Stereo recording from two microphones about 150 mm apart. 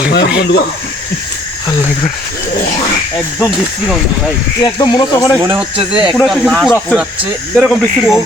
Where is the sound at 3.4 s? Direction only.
Centre (ahead or behind).